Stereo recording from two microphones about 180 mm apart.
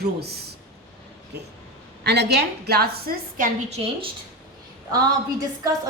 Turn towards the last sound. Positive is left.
turn(degrees=-20)  # may be behind; listen again after turning